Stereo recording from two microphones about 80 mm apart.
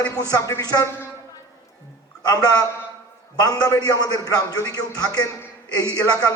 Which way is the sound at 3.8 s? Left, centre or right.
Left.